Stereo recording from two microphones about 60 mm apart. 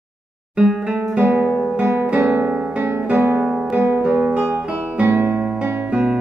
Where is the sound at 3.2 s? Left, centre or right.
Right.